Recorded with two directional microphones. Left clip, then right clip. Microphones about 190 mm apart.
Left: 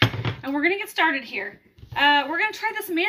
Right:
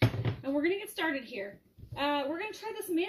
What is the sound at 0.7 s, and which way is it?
Speech, 55° left (ahead or behind).